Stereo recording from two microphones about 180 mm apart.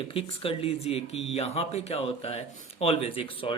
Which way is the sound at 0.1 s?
30° left (ahead or behind).